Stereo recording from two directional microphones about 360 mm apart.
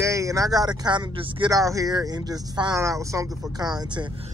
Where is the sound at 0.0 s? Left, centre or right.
Centre.